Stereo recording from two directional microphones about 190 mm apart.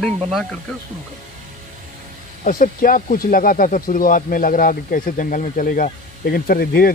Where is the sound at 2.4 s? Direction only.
45° left (ahead or behind).